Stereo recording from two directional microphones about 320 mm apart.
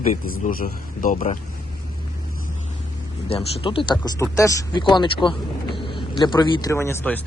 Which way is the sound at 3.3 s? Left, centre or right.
Centre.